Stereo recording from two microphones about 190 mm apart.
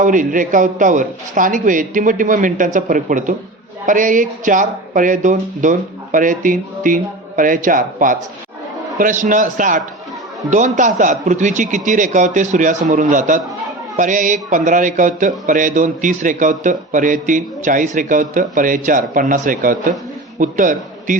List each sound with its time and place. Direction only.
0.0 s a man's voice: 45° right (ahead or behind)